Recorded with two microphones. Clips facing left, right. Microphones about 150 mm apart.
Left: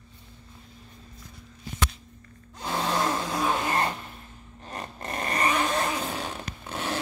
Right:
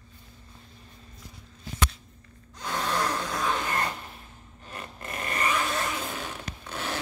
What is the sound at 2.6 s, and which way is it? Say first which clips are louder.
Gasp: left 2 dB; 30° left (ahead or behind).